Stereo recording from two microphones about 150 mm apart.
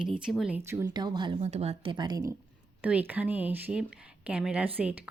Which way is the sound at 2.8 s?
10° right (ahead or behind).